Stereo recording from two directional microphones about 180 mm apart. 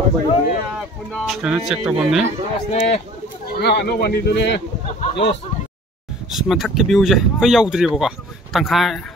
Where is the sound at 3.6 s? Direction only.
65° left (ahead or behind).